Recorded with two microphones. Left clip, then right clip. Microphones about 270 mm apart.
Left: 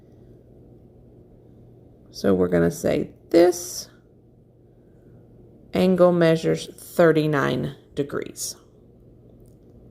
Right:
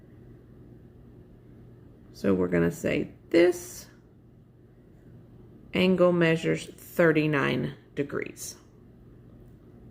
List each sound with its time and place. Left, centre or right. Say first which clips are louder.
2.2 s a woman's voice: left 5 dB; centre
5.7 s a woman's voice: left 5 dB; centre